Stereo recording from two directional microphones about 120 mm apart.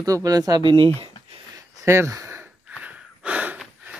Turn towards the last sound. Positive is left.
turn(degrees=-10)  # may be behind; listen again after turning